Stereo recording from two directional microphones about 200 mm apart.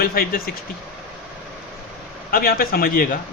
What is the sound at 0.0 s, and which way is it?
Speech, 50° left (ahead or behind).